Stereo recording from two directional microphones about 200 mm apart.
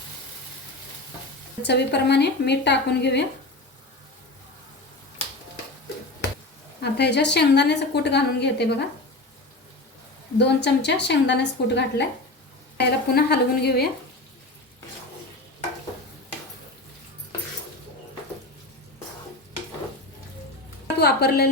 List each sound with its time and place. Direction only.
1.6 s a woman's voice: 55° left (ahead or behind)
6.8 s a woman's voice: 55° left (ahead or behind)
10.3 s a woman's voice: 60° left (ahead or behind)
21.0 s speech: 55° left (ahead or behind)